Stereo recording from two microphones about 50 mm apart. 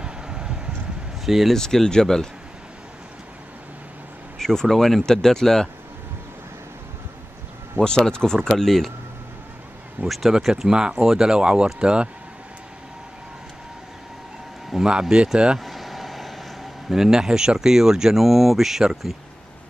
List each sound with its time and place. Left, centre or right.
0.0 s a sound: centre
1.2 s speech: centre
1.5 s speech: centre
4.4 s speech: centre
7.8 s speech: centre
10.0 s speech: centre
14.7 s speech: centre
15.6 s vehicle: centre
16.9 s speech: centre